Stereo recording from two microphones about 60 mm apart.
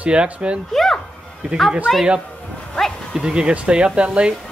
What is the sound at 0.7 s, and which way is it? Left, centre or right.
A man's voice, centre.